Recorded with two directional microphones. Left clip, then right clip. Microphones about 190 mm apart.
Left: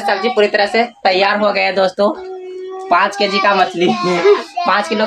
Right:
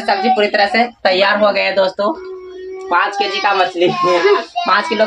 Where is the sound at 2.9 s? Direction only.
45° left (ahead or behind).